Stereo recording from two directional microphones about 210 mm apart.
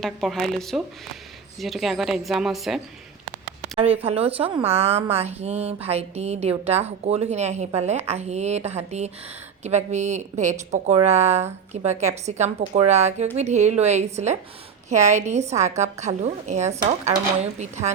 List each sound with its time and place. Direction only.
0.0 s a woman's voice: centre (ahead or behind)
4.0 s a woman's voice: 30° right (ahead or behind)